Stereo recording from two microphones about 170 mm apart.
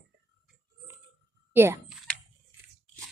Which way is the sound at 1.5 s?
10° right (ahead or behind).